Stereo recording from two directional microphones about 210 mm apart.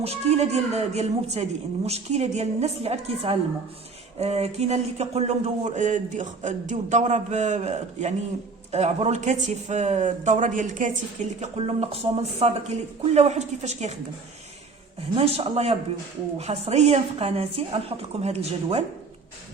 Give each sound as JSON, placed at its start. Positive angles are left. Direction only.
{"t": 0.0, "sound": "speech", "side_deg": -30}
{"t": 15.1, "sound": "a woman's voice", "side_deg": -25}